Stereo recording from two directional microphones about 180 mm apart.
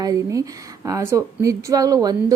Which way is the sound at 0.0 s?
20° right (ahead or behind).